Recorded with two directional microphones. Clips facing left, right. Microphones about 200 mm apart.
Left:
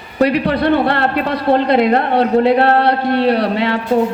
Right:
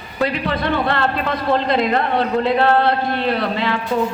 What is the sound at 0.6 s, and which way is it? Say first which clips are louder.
Speech: left 4 dB; 60° left (ahead or behind).